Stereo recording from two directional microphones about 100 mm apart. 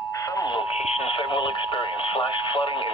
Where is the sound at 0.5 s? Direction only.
90° left.